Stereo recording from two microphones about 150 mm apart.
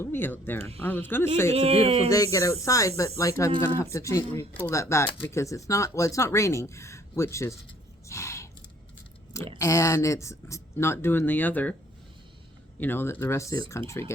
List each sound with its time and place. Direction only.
0.0 s speech: 15° left (ahead or behind)
1.5 s speech: 45° right (ahead or behind)
2.0 s speech: 20° left (ahead or behind)
8.0 s gasp: 20° left (ahead or behind)
9.6 s speech: 20° left (ahead or behind)
12.8 s speech: 15° left (ahead or behind)